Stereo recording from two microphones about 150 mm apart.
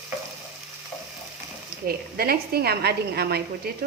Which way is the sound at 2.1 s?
85° right.